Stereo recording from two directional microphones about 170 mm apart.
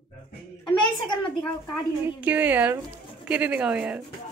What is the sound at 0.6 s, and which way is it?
Speech, 25° left (ahead or behind).